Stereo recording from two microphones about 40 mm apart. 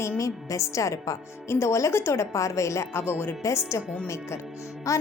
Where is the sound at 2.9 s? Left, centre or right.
Left.